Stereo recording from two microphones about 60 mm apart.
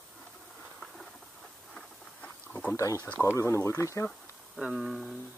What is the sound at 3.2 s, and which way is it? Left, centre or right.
Speech, left.